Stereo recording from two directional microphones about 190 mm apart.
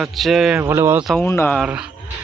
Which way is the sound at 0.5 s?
10° right (ahead or behind).